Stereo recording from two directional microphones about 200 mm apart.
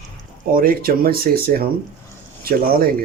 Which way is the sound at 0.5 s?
45° right (ahead or behind).